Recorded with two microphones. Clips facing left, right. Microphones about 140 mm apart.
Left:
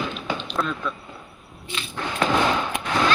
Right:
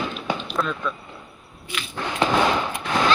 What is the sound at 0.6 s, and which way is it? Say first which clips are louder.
Speech: even; centre (ahead or behind).